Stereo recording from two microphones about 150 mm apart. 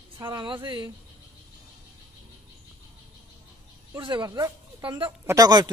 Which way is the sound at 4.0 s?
30° right (ahead or behind).